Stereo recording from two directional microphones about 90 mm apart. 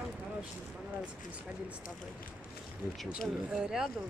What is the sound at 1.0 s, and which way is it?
Speech, 15° right (ahead or behind).